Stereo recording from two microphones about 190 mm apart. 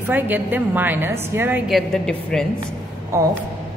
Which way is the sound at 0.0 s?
10° right (ahead or behind).